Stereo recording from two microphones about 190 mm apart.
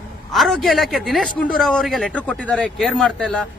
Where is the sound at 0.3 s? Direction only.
Centre (ahead or behind).